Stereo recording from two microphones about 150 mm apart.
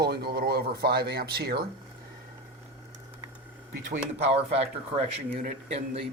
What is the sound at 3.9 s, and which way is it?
Speech, 45° right (ahead or behind).